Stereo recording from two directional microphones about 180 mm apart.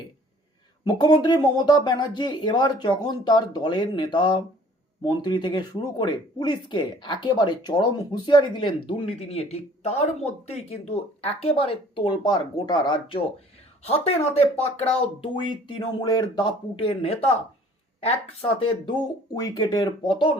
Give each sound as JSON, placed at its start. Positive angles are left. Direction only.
{"t": 0.9, "sound": "speech", "side_deg": 25}